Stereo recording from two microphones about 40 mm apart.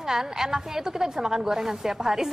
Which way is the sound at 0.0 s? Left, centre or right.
Centre.